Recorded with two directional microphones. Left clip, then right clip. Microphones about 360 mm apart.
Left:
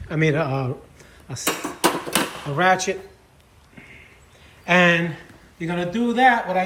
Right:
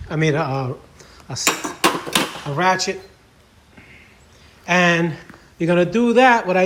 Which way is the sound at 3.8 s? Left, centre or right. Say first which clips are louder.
Left 1 dB; centre.